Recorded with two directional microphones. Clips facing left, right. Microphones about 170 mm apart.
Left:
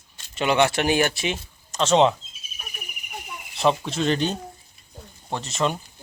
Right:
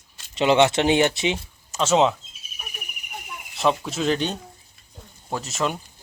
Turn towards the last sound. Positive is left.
turn(degrees=0)  # may be behind; listen again after turning